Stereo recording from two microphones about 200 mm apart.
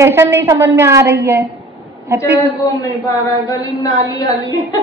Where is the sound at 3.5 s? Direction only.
15° left (ahead or behind).